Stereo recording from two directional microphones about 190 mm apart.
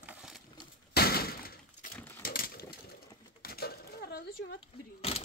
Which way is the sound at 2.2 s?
50° left (ahead or behind).